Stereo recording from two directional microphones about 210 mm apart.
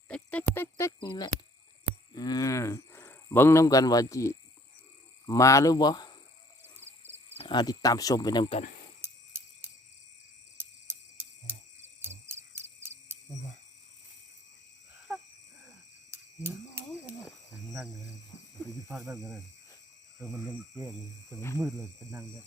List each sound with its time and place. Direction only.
0.1 s music: 5° left (ahead or behind)
0.5 s cricket: 10° left (ahead or behind)
2.1 s a sound: 20° left (ahead or behind)
5.2 s speech: 15° left (ahead or behind)
7.3 s speech: 20° left (ahead or behind)
10.6 s cricket: 10° right (ahead or behind)
16.1 s a sound: 10° right (ahead or behind)
18.9 s cricket: 15° right (ahead or behind)
20.1 s cricket: centre (ahead or behind)
21.8 s cricket: 15° right (ahead or behind)